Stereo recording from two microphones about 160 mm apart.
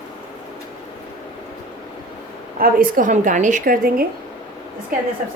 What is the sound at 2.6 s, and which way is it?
A woman's voice, 60° right (ahead or behind).